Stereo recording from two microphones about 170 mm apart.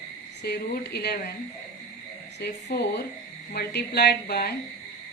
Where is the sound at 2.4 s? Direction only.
70° left (ahead or behind).